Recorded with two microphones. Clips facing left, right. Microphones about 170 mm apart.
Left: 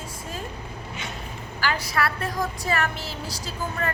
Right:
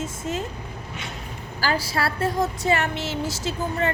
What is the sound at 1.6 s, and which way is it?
A woman's voice, 30° right (ahead or behind).